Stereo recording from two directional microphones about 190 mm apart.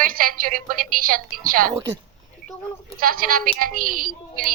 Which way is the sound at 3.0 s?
50° right (ahead or behind).